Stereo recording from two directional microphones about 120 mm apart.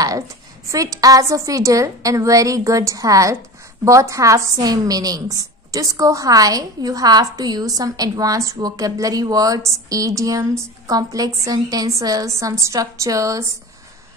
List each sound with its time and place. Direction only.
0.7 s a woman's voice: 30° right (ahead or behind)